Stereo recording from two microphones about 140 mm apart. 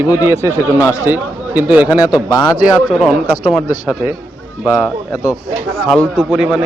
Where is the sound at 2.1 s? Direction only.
30° left (ahead or behind).